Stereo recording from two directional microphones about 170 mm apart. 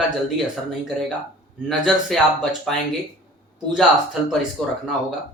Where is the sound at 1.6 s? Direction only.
Centre (ahead or behind).